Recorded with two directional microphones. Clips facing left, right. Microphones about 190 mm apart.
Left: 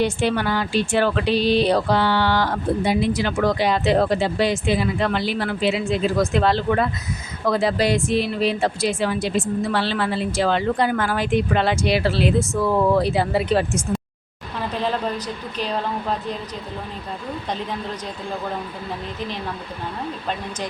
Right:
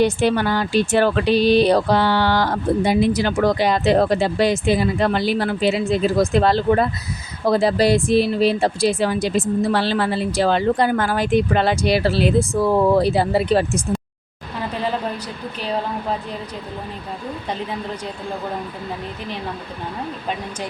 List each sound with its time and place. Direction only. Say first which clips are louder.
0.0 s speech: right 3 dB; 40° right (ahead or behind)